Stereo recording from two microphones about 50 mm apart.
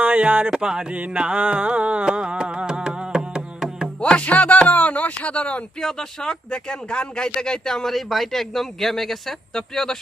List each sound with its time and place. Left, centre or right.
0.0 s speech: right
0.5 s music: centre
0.9 s music: right
1.2 s a sound: right
4.0 s music: left
4.7 s speech: left
5.8 s speech: centre